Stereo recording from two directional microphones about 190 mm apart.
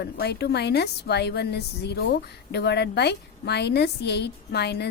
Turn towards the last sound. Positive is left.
turn(degrees=60)  # may be behind; listen again after turning